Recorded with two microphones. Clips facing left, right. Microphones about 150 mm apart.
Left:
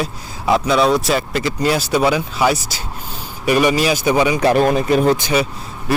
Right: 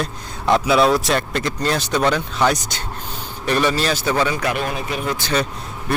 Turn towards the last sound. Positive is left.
turn(degrees=10)  # may be behind; listen again after turning